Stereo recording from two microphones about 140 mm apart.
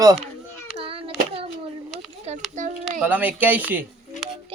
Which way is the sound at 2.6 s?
65° right (ahead or behind).